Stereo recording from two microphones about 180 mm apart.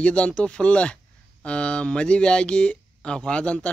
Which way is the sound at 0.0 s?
5° left (ahead or behind).